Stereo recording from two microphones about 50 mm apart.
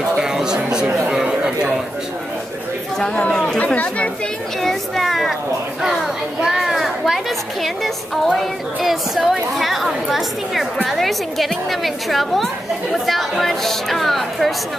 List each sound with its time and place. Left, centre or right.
0.2 s a sound: centre
3.4 s speech: left
4.6 s a woman's voice: centre
6.4 s a woman's voice: centre